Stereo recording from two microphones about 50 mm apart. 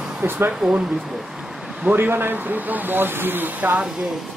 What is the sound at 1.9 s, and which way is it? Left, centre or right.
Speech, right.